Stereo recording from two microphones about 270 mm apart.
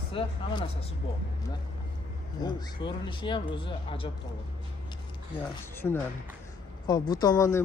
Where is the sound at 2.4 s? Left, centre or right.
Centre.